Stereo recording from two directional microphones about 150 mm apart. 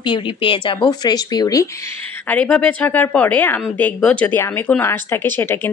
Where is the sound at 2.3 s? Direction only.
10° left (ahead or behind).